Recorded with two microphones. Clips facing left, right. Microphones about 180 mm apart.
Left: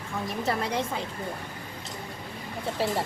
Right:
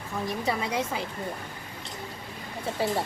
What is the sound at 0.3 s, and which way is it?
Speech, centre (ahead or behind).